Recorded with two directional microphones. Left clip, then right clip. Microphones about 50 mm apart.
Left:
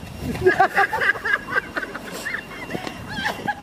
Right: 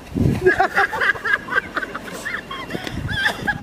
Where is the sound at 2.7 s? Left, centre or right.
Right.